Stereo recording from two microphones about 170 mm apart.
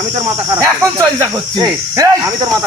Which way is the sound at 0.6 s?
20° right (ahead or behind).